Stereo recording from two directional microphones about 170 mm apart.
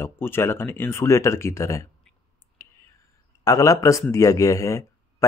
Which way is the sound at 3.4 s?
20° left (ahead or behind).